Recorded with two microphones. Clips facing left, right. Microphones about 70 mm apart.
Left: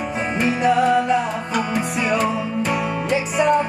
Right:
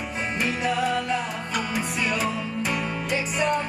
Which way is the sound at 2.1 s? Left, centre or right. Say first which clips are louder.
Left 7 dB; centre.